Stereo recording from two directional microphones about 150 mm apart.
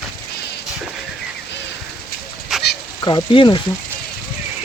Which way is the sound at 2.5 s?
Centre (ahead or behind).